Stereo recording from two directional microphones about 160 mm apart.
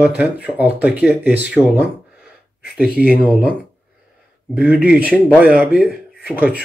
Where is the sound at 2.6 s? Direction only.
75° left (ahead or behind).